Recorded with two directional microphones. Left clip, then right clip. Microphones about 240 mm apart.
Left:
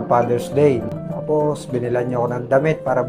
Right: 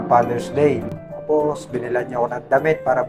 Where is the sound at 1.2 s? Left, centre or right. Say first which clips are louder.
Even; left.